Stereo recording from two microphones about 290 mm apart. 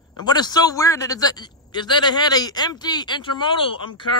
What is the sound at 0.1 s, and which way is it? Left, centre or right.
Speech, centre.